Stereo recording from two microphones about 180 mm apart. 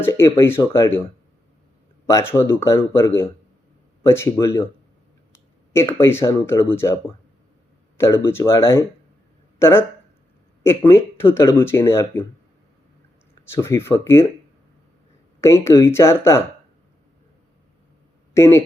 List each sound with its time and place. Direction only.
0.0 s speech: 15° left (ahead or behind)
2.0 s speech: 15° left (ahead or behind)
5.7 s speech: 15° left (ahead or behind)
13.5 s speech: 15° left (ahead or behind)
15.4 s speech: 15° left (ahead or behind)
18.3 s speech: 15° left (ahead or behind)